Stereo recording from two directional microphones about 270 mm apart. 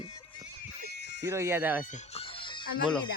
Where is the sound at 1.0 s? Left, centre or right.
Left.